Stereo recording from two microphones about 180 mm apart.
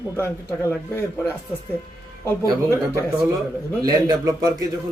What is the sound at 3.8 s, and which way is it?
Speech, 20° right (ahead or behind).